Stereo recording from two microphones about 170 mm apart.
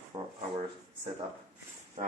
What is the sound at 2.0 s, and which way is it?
Music, 40° right (ahead or behind).